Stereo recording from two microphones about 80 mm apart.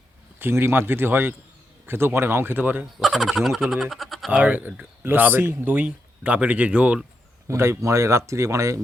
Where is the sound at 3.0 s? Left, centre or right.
Centre.